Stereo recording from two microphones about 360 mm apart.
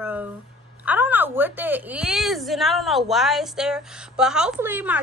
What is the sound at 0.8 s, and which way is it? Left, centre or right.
A woman's voice, centre.